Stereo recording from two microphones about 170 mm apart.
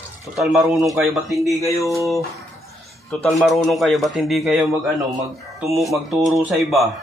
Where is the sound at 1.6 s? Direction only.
20° left (ahead or behind).